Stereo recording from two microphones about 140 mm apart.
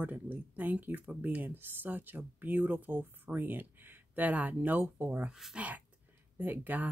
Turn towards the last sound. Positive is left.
turn(degrees=-15)  # may be behind; listen again after turning